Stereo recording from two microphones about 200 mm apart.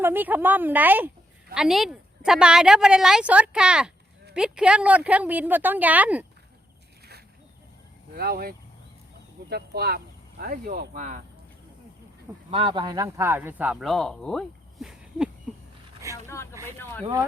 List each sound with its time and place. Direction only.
0.0 s a woman's voice: 10° right (ahead or behind)
8.1 s speech: 50° right (ahead or behind)
12.5 s speech: 25° right (ahead or behind); by 15.3 s centre (ahead or behind)
16.3 s vehicle: 15° left (ahead or behind)
16.7 s a sound: 10° left (ahead or behind)